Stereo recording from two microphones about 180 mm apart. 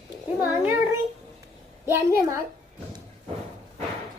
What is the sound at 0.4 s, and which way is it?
Speech, 10° right (ahead or behind).